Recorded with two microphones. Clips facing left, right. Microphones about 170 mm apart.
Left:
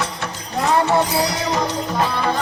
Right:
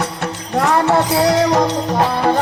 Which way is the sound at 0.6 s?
80° right.